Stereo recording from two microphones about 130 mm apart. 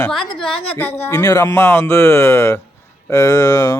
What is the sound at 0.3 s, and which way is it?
Speech, 5° left (ahead or behind).